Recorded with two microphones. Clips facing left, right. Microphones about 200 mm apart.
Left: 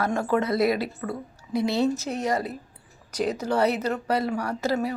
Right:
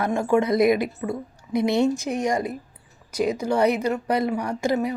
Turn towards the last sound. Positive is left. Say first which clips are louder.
# right 2 dB
turn(degrees=-15)  # may be behind; listen again after turning